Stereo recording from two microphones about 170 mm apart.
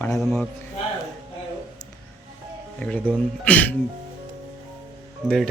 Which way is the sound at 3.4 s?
10° left (ahead or behind).